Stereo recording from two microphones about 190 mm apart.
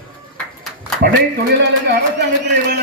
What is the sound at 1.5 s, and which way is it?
Speech, 60° right (ahead or behind).